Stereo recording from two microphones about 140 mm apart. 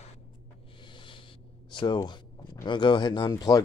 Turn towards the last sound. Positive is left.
turn(degrees=25)  # may be behind; listen again after turning